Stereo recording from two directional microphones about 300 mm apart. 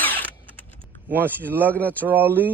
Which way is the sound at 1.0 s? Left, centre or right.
Centre.